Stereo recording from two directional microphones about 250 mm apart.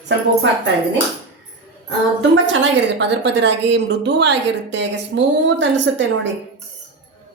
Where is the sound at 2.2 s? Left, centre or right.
Right.